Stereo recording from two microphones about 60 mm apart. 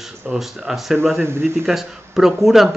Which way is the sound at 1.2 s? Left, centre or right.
Right.